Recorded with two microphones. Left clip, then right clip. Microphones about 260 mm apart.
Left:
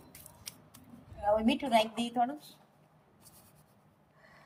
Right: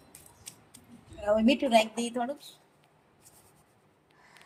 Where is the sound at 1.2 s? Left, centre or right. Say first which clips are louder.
Right 4 dB; right.